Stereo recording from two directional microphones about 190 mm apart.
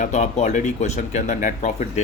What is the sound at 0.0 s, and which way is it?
A man's voice, 40° left (ahead or behind).